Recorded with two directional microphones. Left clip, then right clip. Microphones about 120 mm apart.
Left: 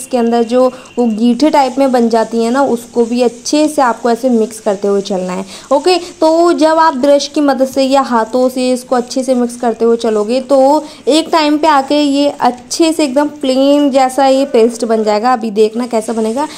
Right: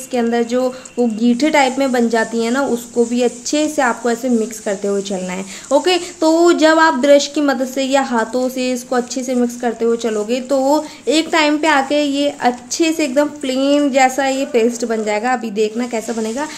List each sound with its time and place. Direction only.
0.1 s a woman's voice: 40° left (ahead or behind)